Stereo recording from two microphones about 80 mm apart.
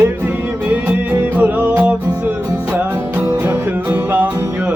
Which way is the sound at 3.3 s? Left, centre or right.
Right.